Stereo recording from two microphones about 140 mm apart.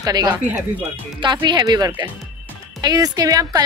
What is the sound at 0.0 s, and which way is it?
A woman's voice, 30° right (ahead or behind).